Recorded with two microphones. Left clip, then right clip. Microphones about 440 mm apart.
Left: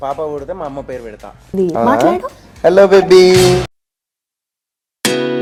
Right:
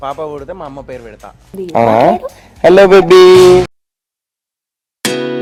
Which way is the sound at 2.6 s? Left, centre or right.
Right.